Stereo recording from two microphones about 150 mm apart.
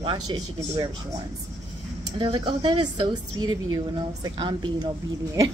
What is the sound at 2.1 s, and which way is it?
Speech, 35° right (ahead or behind).